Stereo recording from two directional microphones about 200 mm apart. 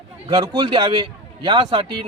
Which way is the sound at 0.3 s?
20° right (ahead or behind).